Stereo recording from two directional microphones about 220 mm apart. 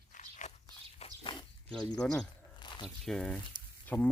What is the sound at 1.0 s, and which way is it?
Walk, 25° left (ahead or behind).